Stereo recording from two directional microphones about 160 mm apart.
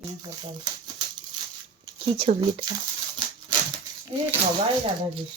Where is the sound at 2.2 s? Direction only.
35° right (ahead or behind).